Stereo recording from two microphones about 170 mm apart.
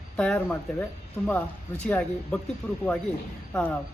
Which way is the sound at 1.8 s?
5° left (ahead or behind).